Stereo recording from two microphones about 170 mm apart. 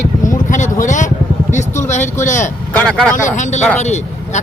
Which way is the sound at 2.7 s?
5° left (ahead or behind).